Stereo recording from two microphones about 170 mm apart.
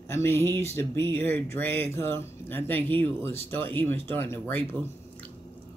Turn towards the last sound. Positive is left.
turn(degrees=10)  # may be behind; listen again after turning